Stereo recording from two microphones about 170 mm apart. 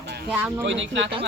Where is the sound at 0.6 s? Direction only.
90° right.